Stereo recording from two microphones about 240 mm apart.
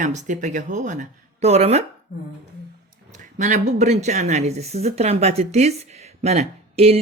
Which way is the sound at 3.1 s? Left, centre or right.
Right.